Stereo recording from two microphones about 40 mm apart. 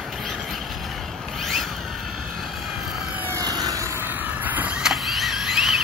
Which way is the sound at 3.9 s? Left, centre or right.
Right.